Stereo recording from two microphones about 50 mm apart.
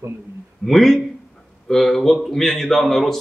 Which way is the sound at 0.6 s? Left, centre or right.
Centre.